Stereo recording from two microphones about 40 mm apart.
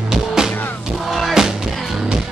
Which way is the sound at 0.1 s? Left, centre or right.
Centre.